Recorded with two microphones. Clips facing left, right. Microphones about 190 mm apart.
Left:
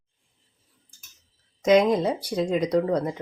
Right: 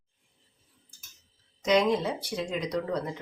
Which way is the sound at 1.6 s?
45° left (ahead or behind).